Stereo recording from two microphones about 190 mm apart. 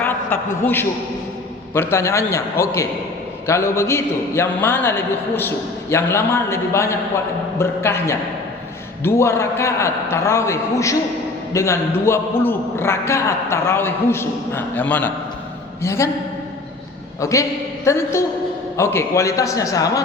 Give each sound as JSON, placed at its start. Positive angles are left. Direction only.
{"t": 0.0, "sound": "a man's voice", "side_deg": 10}
{"t": 17.2, "sound": "a man's voice", "side_deg": 15}